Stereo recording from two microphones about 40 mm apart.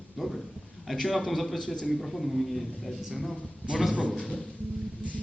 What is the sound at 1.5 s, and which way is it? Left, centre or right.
Speech, centre.